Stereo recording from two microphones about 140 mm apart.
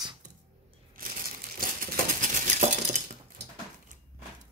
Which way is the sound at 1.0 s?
90° right.